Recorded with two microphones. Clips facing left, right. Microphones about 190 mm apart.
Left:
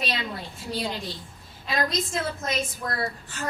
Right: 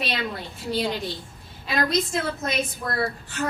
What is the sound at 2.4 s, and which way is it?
Speech, 65° right (ahead or behind).